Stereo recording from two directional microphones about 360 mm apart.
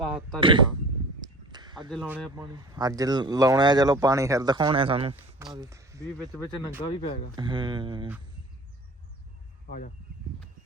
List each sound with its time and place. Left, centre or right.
0.0 s speech: centre
0.3 s speech: centre
1.2 s a sound: centre
1.9 s speech: centre
2.3 s speech: centre
7.0 s speech: centre
7.3 s speech: centre
9.6 s speech: left